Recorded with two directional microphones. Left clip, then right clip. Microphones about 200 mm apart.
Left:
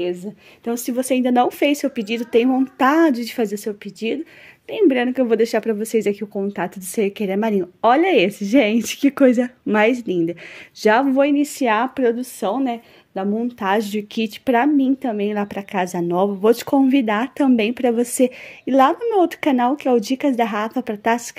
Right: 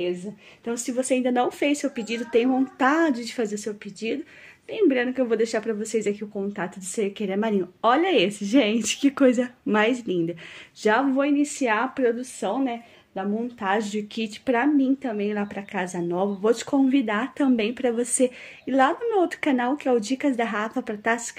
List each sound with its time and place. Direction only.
0.0 s a woman's voice: 50° left (ahead or behind); by 10.3 s 30° left (ahead or behind)
10.8 s a woman's voice: 40° left (ahead or behind)